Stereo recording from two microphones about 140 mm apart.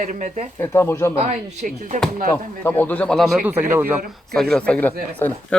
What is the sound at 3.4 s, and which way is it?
Speech, 15° right (ahead or behind).